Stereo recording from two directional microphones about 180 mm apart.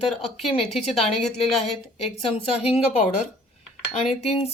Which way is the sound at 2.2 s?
35° left (ahead or behind).